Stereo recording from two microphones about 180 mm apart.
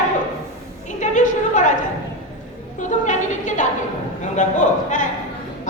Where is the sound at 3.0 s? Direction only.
45° left (ahead or behind).